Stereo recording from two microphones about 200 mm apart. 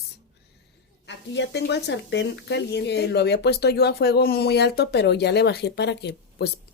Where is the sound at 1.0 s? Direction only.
60° left (ahead or behind).